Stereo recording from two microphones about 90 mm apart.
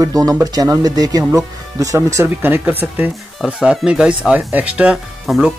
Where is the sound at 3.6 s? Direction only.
10° right (ahead or behind).